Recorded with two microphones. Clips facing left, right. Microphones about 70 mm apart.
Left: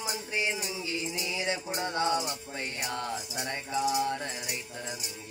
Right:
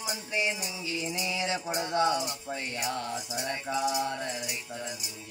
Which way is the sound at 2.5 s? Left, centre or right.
Left.